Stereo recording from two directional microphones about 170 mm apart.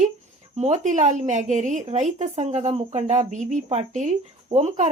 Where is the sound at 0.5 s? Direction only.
40° right (ahead or behind).